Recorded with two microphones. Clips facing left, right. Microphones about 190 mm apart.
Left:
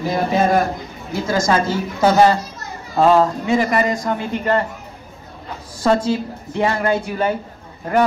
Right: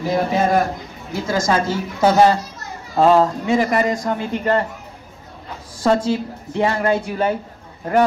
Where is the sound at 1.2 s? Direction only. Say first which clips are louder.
Left 1 dB; 10° right (ahead or behind); by 4.6 s 35° right (ahead or behind).